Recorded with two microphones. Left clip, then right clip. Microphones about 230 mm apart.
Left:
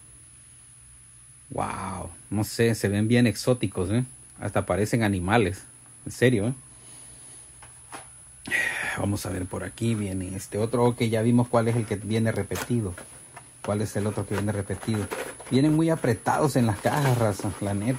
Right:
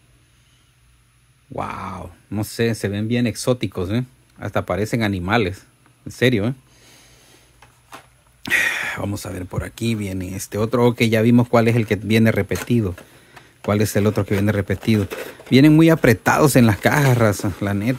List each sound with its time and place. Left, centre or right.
1.5 s speech: centre
3.3 s speech: right
8.4 s speech: right